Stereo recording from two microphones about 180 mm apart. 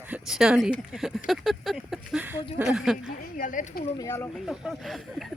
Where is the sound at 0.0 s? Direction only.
5° right (ahead or behind).